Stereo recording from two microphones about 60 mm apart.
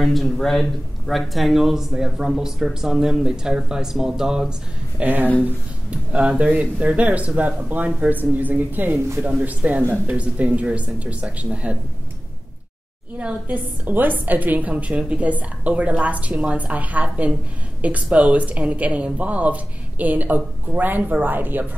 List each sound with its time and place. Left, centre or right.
0.0 s speech: centre
5.0 s speech: right
6.1 s speech: centre
13.2 s speech: right